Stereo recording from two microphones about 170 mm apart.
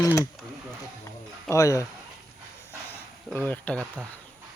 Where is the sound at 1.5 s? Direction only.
20° left (ahead or behind).